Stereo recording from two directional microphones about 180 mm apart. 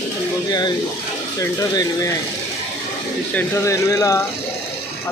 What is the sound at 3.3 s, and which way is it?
Speech, 15° left (ahead or behind).